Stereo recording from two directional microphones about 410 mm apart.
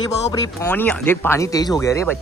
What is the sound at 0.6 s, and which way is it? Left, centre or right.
Speech, centre.